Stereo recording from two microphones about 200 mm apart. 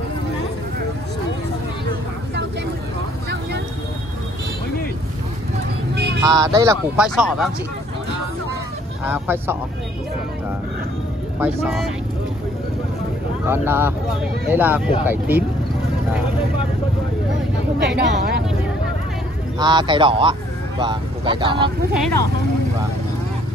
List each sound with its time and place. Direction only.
6.2 s speech: 15° right (ahead or behind)
7.0 s speech: centre (ahead or behind)
9.1 s speech: 10° right (ahead or behind)
11.3 s speech: 5° right (ahead or behind)
13.5 s speech: 10° right (ahead or behind)
17.8 s speech: 55° right (ahead or behind)
19.6 s speech: 20° right (ahead or behind)